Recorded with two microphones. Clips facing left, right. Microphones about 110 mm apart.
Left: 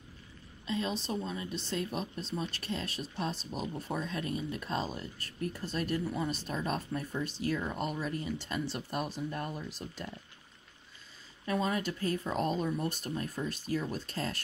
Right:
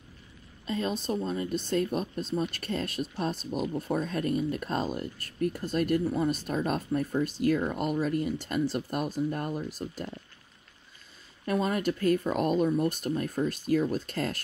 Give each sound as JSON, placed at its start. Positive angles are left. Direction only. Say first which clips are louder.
{"t": 0.7, "sound": "speech", "louder": "right 4 dB", "side_deg": -45}
{"t": 11.4, "sound": "speech", "louder": "right 4 dB", "side_deg": -50}